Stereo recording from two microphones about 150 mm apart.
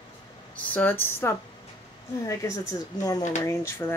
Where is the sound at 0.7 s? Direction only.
15° left (ahead or behind).